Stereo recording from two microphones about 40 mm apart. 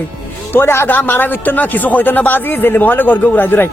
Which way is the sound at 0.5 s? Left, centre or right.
Left.